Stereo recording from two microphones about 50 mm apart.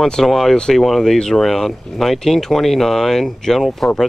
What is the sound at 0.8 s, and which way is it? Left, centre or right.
Speech, centre.